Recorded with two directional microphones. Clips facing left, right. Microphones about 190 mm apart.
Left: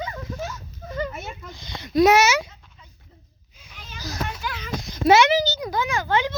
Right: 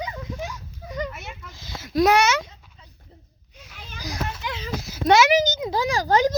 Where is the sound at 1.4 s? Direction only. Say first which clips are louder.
Left 2 dB; 5° right (ahead or behind).